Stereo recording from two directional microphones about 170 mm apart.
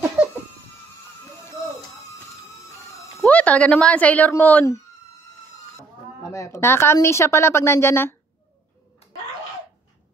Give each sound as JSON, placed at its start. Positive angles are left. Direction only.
{"t": 3.2, "sound": "speech", "side_deg": 10}
{"t": 6.3, "sound": "a woman's voice", "side_deg": 15}